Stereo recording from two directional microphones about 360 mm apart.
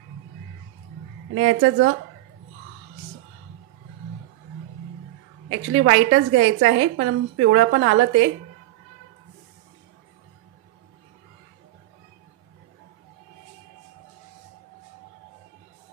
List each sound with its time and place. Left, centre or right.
1.3 s a woman's voice: right
5.5 s a woman's voice: right